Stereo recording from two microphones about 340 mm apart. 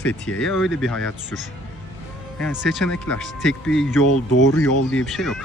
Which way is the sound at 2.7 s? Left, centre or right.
Centre.